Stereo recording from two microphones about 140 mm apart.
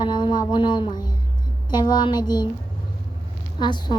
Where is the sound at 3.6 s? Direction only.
30° left (ahead or behind).